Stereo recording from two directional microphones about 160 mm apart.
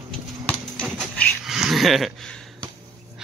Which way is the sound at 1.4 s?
Centre (ahead or behind).